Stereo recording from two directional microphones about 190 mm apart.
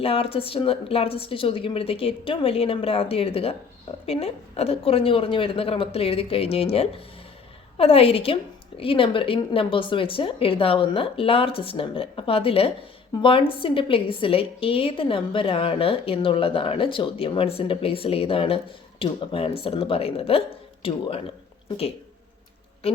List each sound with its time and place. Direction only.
0.0 s a woman's voice: 30° left (ahead or behind)